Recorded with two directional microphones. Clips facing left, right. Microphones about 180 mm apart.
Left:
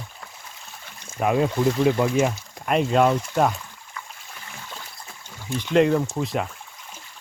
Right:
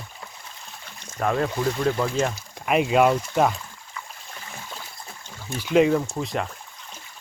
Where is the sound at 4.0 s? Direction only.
Centre (ahead or behind).